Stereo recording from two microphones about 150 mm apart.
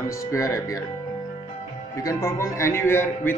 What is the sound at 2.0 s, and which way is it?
Speech, 20° left (ahead or behind).